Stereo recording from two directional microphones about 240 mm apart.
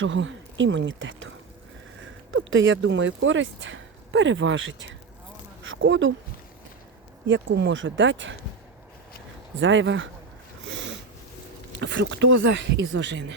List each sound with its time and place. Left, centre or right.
0.0 s speech: right
2.3 s speech: right
7.3 s speech: right
9.6 s speech: right
11.8 s speech: right